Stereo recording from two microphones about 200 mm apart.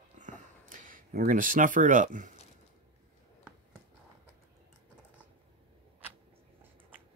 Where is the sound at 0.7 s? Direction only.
45° right (ahead or behind).